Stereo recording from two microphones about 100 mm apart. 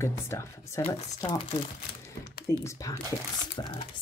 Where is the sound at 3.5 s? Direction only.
50° left (ahead or behind).